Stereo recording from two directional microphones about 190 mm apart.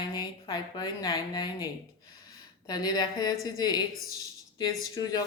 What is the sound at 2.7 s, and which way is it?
A woman's voice, 20° left (ahead or behind).